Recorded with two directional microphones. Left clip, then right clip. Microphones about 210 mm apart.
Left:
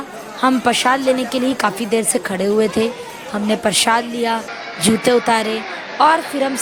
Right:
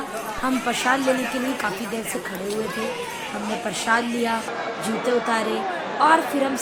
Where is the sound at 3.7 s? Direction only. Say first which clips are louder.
Left 6 dB; 50° left (ahead or behind).